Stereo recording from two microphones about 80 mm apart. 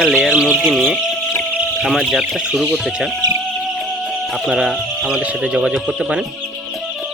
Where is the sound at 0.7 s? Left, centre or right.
Centre.